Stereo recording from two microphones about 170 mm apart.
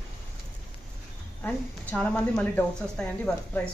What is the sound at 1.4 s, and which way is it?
A woman's voice, 10° left (ahead or behind).